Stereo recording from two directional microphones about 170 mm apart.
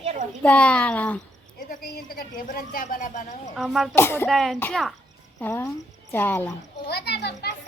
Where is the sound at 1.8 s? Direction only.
60° left (ahead or behind).